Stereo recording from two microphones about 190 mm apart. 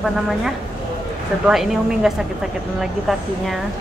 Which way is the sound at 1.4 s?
Centre (ahead or behind).